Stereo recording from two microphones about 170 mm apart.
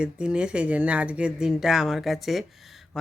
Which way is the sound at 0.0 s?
5° right (ahead or behind).